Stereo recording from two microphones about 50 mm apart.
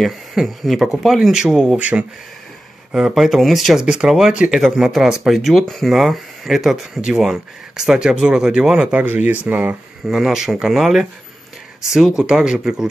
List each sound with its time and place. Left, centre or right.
0.0 s speech: centre
1.8 s speech: right
2.9 s speech: centre
3.7 s speech: centre
8.9 s speech: right
10.0 s speech: centre